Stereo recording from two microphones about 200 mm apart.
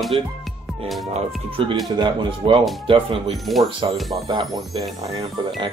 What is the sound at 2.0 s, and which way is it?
Speech, 25° right (ahead or behind).